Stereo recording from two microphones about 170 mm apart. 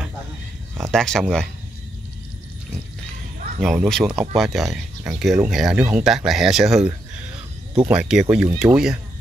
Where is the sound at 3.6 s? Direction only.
Centre (ahead or behind).